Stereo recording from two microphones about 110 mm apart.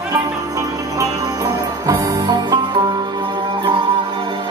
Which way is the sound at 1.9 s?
40° right (ahead or behind).